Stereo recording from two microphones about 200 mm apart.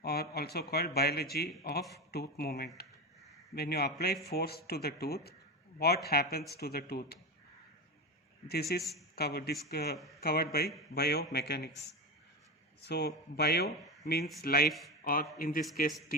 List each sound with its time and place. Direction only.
0.0 s speech: 50° left (ahead or behind)
8.4 s speech: 50° left (ahead or behind)
14.7 s speech: centre (ahead or behind)
15.0 s speech: 45° left (ahead or behind)